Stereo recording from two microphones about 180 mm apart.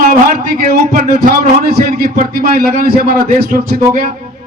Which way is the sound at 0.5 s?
55° right (ahead or behind).